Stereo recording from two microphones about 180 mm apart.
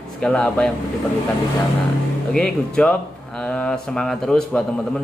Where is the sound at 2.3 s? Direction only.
5° left (ahead or behind).